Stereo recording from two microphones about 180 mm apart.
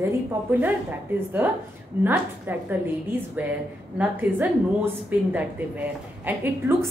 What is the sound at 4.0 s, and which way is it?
A woman's voice, 10° right (ahead or behind).